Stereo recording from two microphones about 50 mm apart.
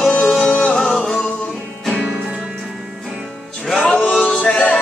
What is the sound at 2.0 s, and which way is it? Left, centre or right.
Music, centre.